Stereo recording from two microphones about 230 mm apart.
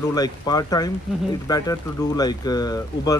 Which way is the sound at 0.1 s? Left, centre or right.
Centre.